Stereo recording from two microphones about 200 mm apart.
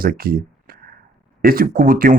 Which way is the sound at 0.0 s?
45° right (ahead or behind).